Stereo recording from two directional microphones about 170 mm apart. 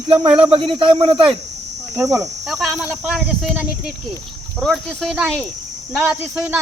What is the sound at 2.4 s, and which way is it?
Speech, centre (ahead or behind).